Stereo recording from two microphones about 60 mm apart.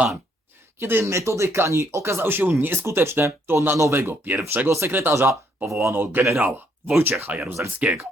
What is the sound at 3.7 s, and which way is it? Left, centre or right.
Speech, right.